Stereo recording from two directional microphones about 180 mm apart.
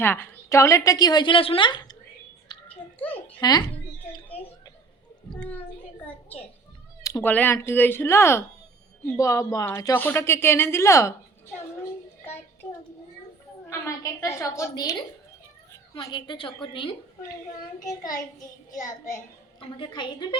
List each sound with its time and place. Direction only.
0.0 s a woman's voice: 10° left (ahead or behind)
2.5 s a sound: 25° left (ahead or behind)
3.4 s a woman's voice: 20° left (ahead or behind)
7.0 s speech: 15° left (ahead or behind)
12.6 s a child's voice: 10° left (ahead or behind)